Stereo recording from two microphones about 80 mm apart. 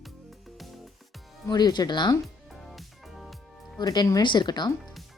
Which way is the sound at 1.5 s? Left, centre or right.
Left.